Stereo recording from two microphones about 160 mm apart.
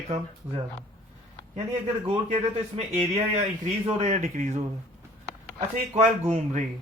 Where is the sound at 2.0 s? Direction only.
40° right (ahead or behind).